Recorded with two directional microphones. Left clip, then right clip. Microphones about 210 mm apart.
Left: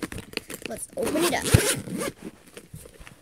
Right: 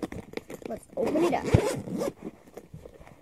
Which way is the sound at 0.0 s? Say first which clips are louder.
Left 3 dB; 35° left (ahead or behind).